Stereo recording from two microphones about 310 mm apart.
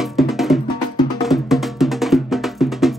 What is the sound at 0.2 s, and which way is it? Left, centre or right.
Music, centre.